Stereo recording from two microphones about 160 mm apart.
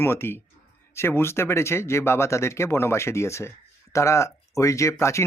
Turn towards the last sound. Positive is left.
turn(degrees=15)  # may be behind; listen again after turning